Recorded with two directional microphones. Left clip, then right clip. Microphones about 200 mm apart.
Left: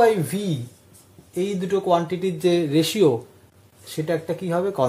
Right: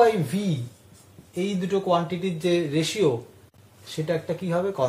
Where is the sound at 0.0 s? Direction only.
40° left (ahead or behind).